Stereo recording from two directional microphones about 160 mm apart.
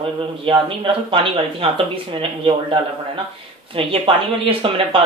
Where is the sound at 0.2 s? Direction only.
30° right (ahead or behind).